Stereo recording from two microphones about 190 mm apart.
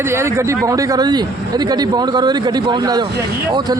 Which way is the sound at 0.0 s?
15° right (ahead or behind).